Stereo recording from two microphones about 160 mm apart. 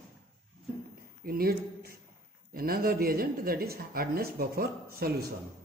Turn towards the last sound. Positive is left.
turn(degrees=-70)  # may be behind; listen again after turning